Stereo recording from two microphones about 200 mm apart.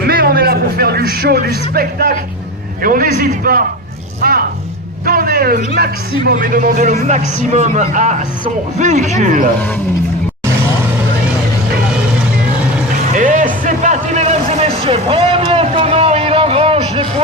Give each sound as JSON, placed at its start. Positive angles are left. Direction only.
{"t": 0.0, "sound": "a sound", "side_deg": -50}
{"t": 1.2, "sound": "a man's voice", "side_deg": -50}
{"t": 13.1, "sound": "music", "side_deg": -40}